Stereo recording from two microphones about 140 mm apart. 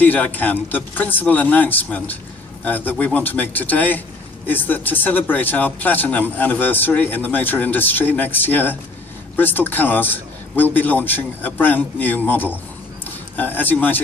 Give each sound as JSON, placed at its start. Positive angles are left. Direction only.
{"t": 0.0, "sound": "speech", "side_deg": 10}